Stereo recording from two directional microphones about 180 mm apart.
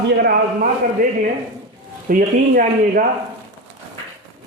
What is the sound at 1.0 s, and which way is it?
Speech, 50° right (ahead or behind).